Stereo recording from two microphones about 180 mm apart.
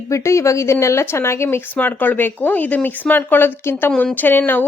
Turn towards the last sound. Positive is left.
turn(degrees=10)  # may be behind; listen again after turning